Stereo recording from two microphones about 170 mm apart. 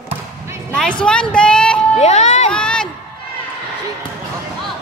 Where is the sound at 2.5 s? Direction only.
5° left (ahead or behind).